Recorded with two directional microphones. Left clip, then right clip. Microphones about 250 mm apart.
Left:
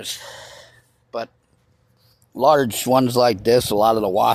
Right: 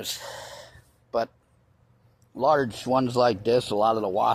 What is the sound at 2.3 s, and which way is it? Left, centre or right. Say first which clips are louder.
Speech: left 6 dB; left.